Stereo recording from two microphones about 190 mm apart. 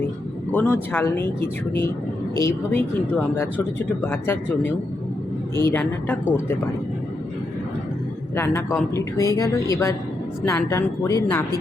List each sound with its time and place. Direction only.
0.5 s speech: 10° left (ahead or behind)
4.0 s speech: 10° left (ahead or behind)
8.4 s speech: 15° left (ahead or behind)